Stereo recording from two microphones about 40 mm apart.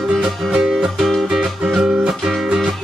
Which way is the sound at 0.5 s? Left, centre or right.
Centre.